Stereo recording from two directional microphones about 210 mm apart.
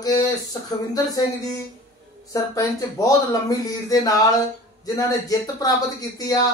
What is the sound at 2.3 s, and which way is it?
Speech, 15° left (ahead or behind).